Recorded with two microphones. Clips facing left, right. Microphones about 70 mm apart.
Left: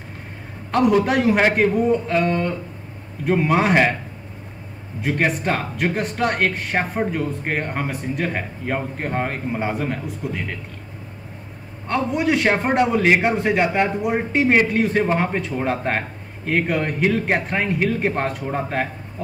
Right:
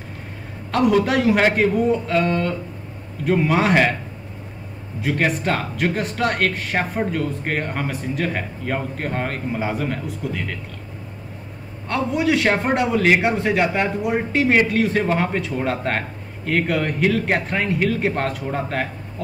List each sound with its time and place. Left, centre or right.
1.0 s a man's voice: centre
2.1 s a man's voice: centre
5.0 s a man's voice: centre
9.6 s a man's voice: centre
11.9 s a man's voice: centre